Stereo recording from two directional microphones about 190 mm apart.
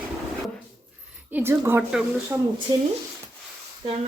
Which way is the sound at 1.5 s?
10° right (ahead or behind).